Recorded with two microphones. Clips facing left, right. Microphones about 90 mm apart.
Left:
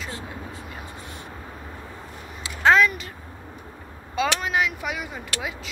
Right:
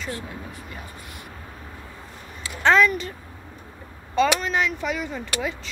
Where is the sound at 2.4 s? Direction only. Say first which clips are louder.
Even; 10° left (ahead or behind).